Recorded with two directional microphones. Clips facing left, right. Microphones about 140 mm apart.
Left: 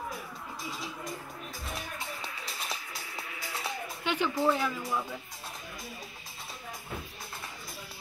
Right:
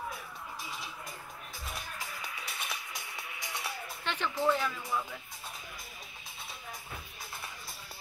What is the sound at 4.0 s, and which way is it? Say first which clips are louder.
Speech: left 3 dB; 10° left (ahead or behind).